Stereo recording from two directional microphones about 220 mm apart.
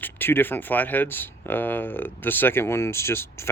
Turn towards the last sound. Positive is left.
turn(degrees=10)  # may be behind; listen again after turning